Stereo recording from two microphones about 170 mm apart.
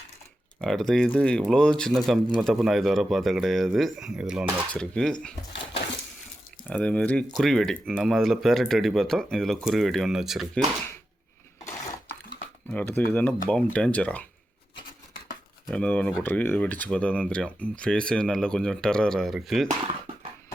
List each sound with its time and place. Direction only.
0.6 s speech: centre (ahead or behind)
6.7 s speech: 5° left (ahead or behind)
11.6 s dishes: 20° left (ahead or behind)
12.7 s speech: 10° left (ahead or behind)
15.7 s speech: 5° left (ahead or behind)